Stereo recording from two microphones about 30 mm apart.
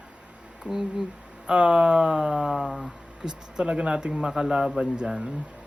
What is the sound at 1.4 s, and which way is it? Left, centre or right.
Speech, right.